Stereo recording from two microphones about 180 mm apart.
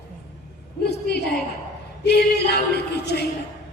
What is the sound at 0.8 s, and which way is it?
A woman's voice, 65° left (ahead or behind).